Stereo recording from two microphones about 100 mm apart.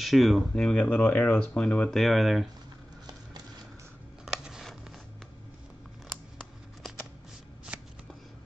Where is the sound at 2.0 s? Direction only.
Centre (ahead or behind).